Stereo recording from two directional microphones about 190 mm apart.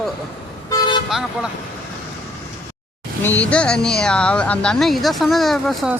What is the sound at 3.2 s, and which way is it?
Speech, 5° left (ahead or behind).